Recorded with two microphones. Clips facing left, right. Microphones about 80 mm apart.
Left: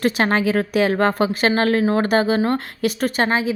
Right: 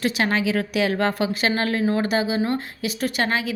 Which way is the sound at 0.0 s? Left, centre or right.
Left.